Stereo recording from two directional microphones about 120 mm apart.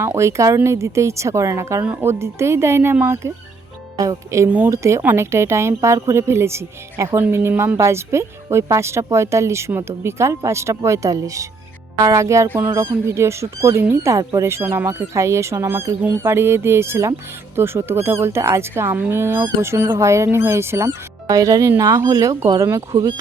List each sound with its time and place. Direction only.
0.0 s speech: 25° right (ahead or behind)
3.9 s speech: 30° right (ahead or behind)